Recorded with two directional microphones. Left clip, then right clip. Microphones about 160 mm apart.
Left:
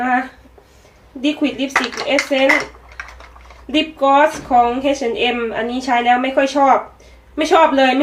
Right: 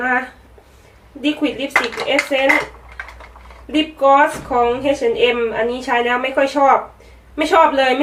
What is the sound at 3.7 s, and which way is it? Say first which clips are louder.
A woman's voice: right 1 dB; 25° left (ahead or behind).